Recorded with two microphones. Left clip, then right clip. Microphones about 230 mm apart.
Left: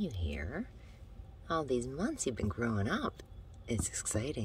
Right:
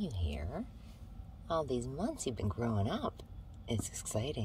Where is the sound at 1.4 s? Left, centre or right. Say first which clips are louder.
Left 1 dB; centre.